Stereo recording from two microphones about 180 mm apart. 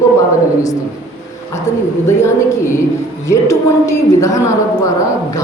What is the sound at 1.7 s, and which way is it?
A woman's voice, 15° left (ahead or behind).